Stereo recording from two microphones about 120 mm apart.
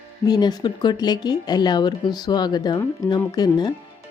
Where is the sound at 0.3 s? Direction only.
35° left (ahead or behind).